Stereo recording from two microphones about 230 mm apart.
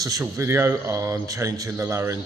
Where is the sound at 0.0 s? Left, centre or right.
Centre.